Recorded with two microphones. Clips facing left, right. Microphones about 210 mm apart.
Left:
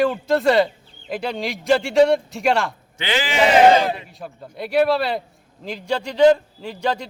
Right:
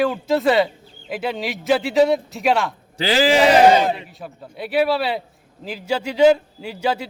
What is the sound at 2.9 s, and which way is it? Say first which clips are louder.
Speech: right 6 dB; 35° right (ahead or behind).